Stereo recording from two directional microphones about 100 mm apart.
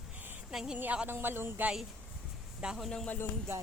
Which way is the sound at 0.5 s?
5° right (ahead or behind).